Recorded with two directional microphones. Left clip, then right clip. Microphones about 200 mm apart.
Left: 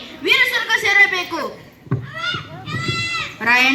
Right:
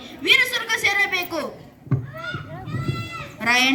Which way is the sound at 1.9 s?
40° right (ahead or behind).